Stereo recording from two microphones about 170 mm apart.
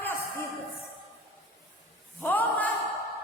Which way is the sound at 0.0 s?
15° left (ahead or behind).